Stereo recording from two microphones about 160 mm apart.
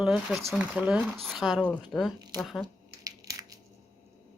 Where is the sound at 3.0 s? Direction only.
20° right (ahead or behind).